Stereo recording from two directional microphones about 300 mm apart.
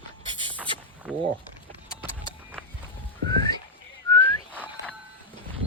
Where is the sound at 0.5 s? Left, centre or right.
Centre.